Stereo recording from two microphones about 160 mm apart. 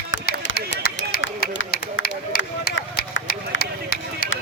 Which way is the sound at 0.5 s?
75° left (ahead or behind).